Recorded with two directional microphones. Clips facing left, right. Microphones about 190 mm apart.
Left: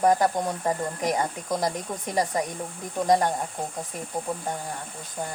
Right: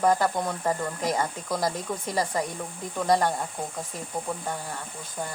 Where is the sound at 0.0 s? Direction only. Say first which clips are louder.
Left 2 dB; 15° left (ahead or behind).